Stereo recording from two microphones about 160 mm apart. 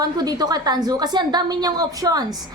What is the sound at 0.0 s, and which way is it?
A woman's voice, 25° right (ahead or behind).